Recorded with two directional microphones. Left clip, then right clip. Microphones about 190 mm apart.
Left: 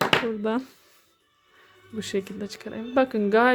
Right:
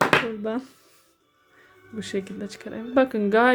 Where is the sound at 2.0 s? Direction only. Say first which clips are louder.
Left 1 dB; 20° left (ahead or behind).